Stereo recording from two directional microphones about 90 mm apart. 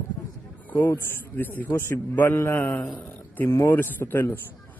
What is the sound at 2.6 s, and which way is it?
Speech, 15° left (ahead or behind).